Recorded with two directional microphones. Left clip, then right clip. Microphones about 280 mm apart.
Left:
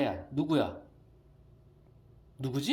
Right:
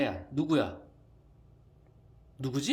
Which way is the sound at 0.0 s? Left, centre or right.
Centre.